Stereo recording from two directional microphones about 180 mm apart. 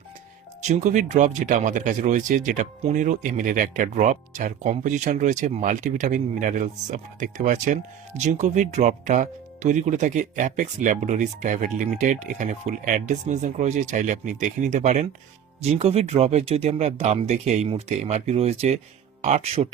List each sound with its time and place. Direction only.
0.7 s speech: 40° right (ahead or behind)